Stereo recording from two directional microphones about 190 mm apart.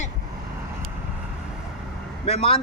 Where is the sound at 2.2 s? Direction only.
30° left (ahead or behind).